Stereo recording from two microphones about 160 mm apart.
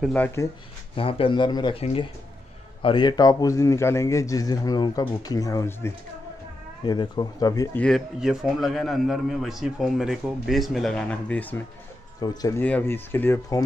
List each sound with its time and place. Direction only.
0.1 s speech: 10° left (ahead or behind)
0.9 s a man's voice: 35° left (ahead or behind); by 5.9 s 15° left (ahead or behind)
6.8 s a man's voice: 30° left (ahead or behind)
7.8 s a man's voice: centre (ahead or behind)
12.2 s a man's voice: 20° left (ahead or behind)
12.6 s speech: 10° left (ahead or behind)